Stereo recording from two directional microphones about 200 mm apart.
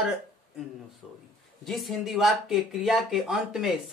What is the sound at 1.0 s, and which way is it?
Speech, centre (ahead or behind).